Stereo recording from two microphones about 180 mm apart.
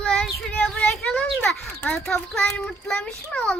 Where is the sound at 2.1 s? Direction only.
5° left (ahead or behind).